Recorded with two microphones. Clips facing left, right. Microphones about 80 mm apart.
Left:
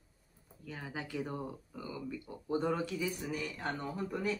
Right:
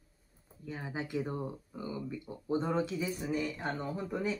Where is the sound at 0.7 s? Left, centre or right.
Right.